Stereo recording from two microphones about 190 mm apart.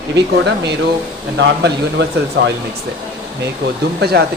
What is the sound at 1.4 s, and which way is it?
A man's voice, 65° right (ahead or behind).